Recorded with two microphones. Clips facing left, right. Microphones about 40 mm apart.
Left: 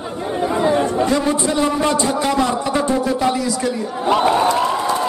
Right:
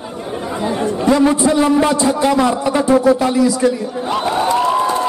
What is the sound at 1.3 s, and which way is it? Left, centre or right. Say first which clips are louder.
A man's voice: right 5 dB; centre.